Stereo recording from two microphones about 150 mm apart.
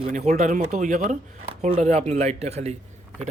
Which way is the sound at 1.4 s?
40° right (ahead or behind).